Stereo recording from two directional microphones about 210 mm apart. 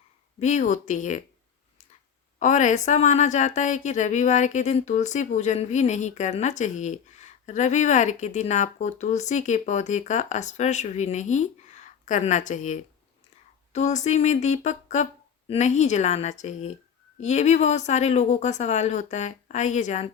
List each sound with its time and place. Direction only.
0.3 s speech: 35° left (ahead or behind)
2.4 s speech: 35° left (ahead or behind)